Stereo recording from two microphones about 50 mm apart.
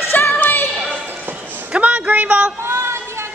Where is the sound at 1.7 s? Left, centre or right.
Right.